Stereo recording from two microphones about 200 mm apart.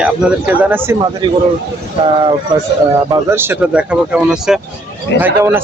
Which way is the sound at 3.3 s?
10° right (ahead or behind).